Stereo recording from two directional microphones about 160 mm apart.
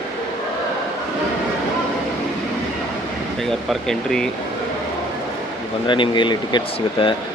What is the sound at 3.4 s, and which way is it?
Speech, centre (ahead or behind).